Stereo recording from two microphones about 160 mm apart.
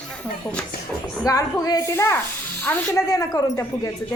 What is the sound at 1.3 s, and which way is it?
A woman's voice, 20° left (ahead or behind).